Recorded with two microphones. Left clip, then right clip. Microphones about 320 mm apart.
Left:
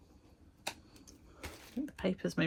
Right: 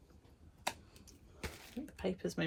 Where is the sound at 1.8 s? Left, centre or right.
Left.